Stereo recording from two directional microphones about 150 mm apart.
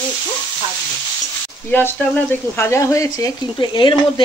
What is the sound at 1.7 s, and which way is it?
Speech, 15° left (ahead or behind).